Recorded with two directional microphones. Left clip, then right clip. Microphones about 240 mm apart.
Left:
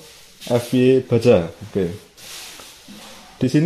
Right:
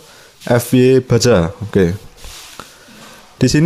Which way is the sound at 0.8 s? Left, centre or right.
Right.